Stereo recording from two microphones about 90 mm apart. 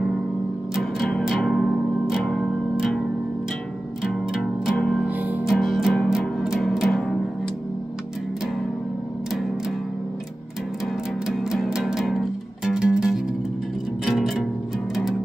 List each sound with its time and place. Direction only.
0.7 s music: centre (ahead or behind)
4.3 s music: 5° right (ahead or behind)
4.7 s music: 10° left (ahead or behind)
5.0 s music: 15° right (ahead or behind)
5.4 s music: centre (ahead or behind)
11.2 s music: 5° right (ahead or behind)